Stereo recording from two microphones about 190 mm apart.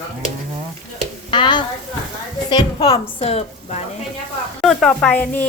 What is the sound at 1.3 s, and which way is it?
A woman's voice, 25° left (ahead or behind).